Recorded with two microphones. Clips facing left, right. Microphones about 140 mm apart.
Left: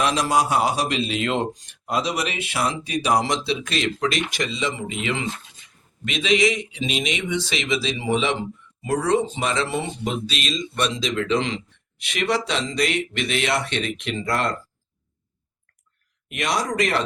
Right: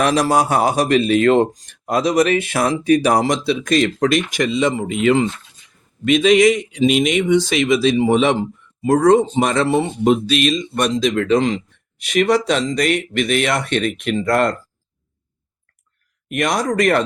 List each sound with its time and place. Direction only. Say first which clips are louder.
0.0 s a man's voice: right 5 dB; 45° right (ahead or behind)
16.3 s a man's voice: right 6 dB; 50° right (ahead or behind)